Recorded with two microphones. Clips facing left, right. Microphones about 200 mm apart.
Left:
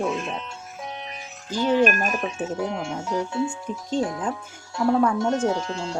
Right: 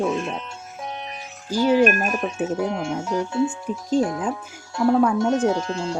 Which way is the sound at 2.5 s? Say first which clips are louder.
Right 3 dB; 50° right (ahead or behind).